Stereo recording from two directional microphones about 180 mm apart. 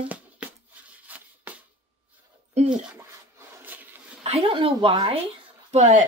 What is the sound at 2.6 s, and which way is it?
Speech, 40° right (ahead or behind).